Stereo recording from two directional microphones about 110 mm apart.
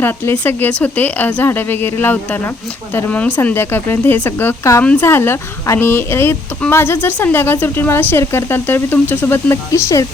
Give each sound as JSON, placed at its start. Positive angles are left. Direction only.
{"t": 0.0, "sound": "speech", "side_deg": 20}